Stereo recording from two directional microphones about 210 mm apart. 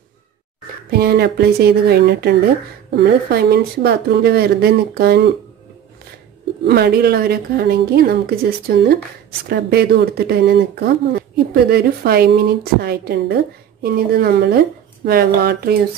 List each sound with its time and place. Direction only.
0.9 s speech: 50° right (ahead or behind)
6.6 s speech: 50° right (ahead or behind)